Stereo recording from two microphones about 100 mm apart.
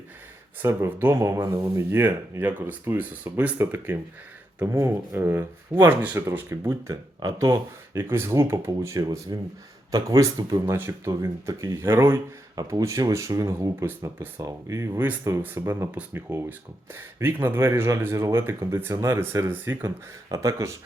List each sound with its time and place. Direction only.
0.6 s speech: 25° right (ahead or behind)
9.3 s speech: 40° right (ahead or behind); by 19.9 s 20° right (ahead or behind)
20.3 s speech: 35° right (ahead or behind)